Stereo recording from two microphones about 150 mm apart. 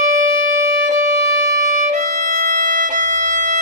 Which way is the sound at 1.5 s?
60° right (ahead or behind).